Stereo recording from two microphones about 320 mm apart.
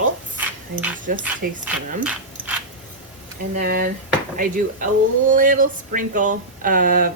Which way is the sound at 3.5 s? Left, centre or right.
Right.